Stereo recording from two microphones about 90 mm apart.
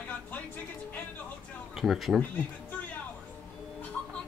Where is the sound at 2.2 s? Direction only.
20° left (ahead or behind).